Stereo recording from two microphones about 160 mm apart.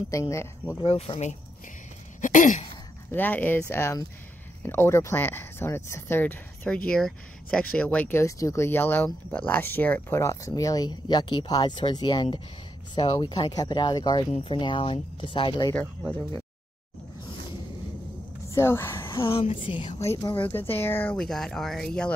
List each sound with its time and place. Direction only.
0.1 s speech: 20° left (ahead or behind)
0.8 s speech: 40° left (ahead or behind)
2.2 s a sound: 50° left (ahead or behind)
3.1 s speech: 10° left (ahead or behind); by 15.7 s 30° left (ahead or behind)
18.5 s speech: 15° left (ahead or behind)
19.2 s speech: 35° left (ahead or behind)
20.0 s speech: 20° left (ahead or behind)